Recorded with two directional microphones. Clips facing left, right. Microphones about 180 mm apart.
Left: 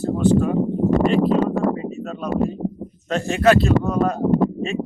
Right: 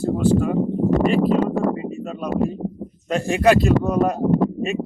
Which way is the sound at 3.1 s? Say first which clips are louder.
Even; 10° right (ahead or behind).